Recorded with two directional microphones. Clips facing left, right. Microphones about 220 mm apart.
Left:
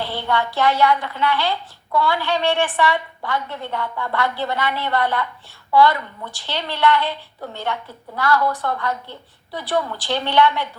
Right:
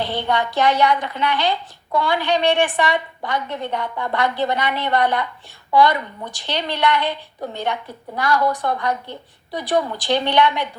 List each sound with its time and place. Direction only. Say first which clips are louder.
0.0 s speech: right 1 dB; 20° right (ahead or behind)